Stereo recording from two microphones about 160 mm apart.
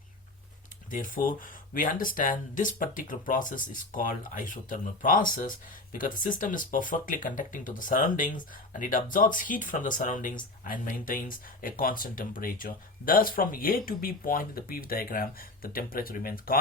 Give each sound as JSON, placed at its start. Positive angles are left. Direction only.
{"t": 0.9, "sound": "speech", "side_deg": 55}